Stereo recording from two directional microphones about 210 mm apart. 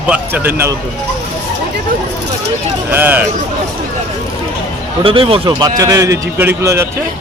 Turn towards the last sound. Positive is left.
turn(degrees=-15)  # may be behind; listen again after turning